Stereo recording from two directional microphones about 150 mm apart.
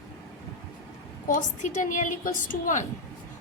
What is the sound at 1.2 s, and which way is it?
A woman's voice, 60° left (ahead or behind).